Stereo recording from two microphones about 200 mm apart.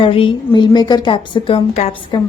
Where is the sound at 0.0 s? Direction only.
25° left (ahead or behind).